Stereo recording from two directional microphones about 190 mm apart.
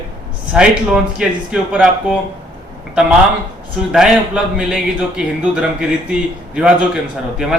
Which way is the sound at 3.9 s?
5° right (ahead or behind).